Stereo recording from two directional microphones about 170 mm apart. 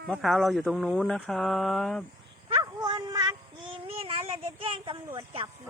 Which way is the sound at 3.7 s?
30° right (ahead or behind).